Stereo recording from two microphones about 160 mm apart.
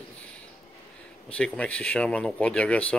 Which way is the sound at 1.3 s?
10° left (ahead or behind).